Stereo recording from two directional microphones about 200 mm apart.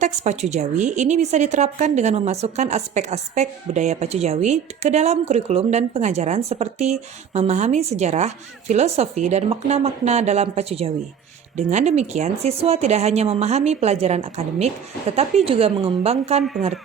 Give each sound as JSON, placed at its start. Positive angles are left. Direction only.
{"t": 0.0, "sound": "a woman's voice", "side_deg": -35}